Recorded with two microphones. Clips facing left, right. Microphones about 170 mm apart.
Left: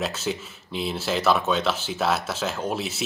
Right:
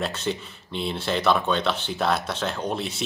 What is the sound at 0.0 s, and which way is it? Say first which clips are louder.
Speech: even; 5° left (ahead or behind).